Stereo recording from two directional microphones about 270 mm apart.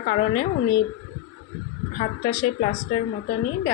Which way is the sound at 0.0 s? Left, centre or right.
Left.